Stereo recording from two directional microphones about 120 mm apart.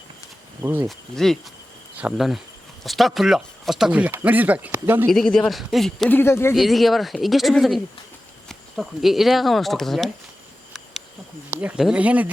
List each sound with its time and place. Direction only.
0.6 s speech: 25° right (ahead or behind)
0.9 s speech: centre (ahead or behind); by 5.0 s 20° right (ahead or behind)
5.0 s speech: 5° left (ahead or behind)
6.1 s speech: 20° left (ahead or behind)
6.5 s speech: centre (ahead or behind)
11.5 s speech: 10° right (ahead or behind)